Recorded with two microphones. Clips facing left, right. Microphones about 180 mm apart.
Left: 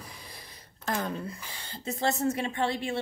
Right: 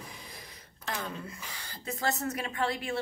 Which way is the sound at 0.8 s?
50° left (ahead or behind).